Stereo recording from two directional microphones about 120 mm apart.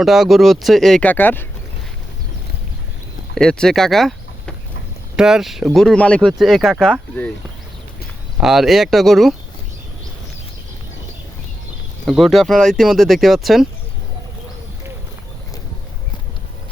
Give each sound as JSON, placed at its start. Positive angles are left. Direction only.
{"t": 0.0, "sound": "speech", "side_deg": -5}
{"t": 1.0, "sound": "speech", "side_deg": 15}
{"t": 3.3, "sound": "speech", "side_deg": 5}
{"t": 8.4, "sound": "speech", "side_deg": -5}
{"t": 12.0, "sound": "speech", "side_deg": 0}